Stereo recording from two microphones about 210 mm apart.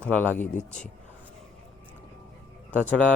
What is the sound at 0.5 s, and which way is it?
Speech, 35° left (ahead or behind).